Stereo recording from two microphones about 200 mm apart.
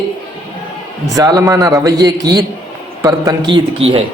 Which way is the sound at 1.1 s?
15° right (ahead or behind).